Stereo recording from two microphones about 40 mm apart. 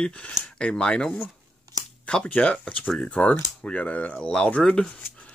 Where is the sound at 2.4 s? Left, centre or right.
Left.